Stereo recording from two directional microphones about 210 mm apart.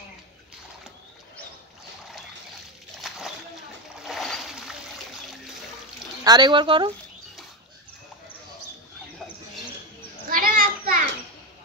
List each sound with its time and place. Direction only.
3.0 s slosh: centre (ahead or behind)
4.0 s splash: centre (ahead or behind)
6.2 s speech: 20° right (ahead or behind)
10.3 s children playing: 40° right (ahead or behind)